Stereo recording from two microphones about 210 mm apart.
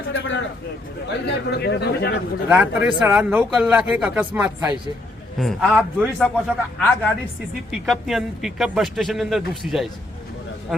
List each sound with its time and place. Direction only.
1.0 s a man's voice: 50° left (ahead or behind)
2.5 s speech: 5° right (ahead or behind)